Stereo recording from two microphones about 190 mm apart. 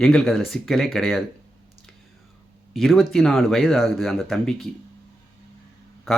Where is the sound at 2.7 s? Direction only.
Centre (ahead or behind).